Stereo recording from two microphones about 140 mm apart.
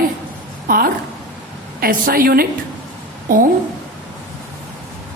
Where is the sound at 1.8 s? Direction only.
90° right.